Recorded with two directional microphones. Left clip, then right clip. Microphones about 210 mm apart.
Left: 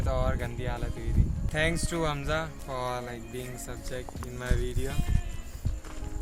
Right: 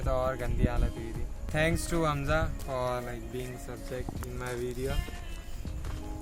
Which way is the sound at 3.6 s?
45° left (ahead or behind).